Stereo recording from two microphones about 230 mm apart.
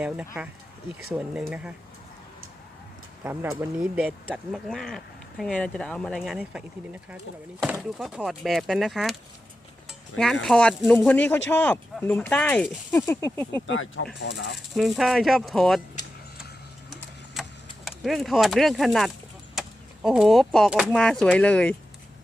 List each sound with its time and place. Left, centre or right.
1.1 s speech: centre
3.2 s speech: centre
7.6 s speech: centre
10.4 s speech: centre
13.7 s speech: left
14.8 s speech: centre
17.4 s a sound: centre
17.8 s speech: centre